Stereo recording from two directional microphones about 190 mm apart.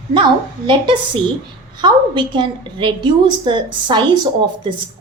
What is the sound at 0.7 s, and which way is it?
A woman's voice, 25° right (ahead or behind).